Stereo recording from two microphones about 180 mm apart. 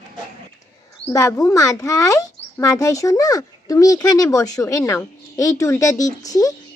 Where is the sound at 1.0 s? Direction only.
20° left (ahead or behind).